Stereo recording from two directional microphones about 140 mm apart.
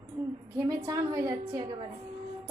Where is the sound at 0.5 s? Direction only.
25° right (ahead or behind).